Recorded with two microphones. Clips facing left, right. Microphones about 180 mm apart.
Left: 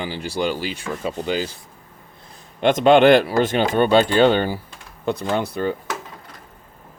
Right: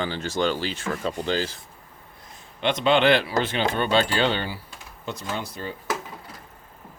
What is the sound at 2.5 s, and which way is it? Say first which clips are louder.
Speech: left 7 dB; 45° left (ahead or behind).